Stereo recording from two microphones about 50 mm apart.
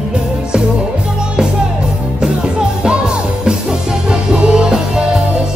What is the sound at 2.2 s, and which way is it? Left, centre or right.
Music, centre.